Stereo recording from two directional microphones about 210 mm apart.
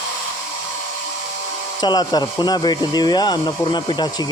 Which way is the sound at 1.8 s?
20° left (ahead or behind).